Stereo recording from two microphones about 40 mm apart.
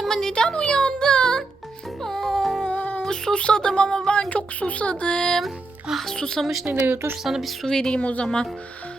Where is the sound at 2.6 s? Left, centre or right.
Left.